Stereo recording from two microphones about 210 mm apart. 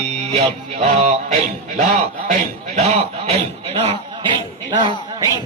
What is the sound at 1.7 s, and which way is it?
Speech, 35° right (ahead or behind).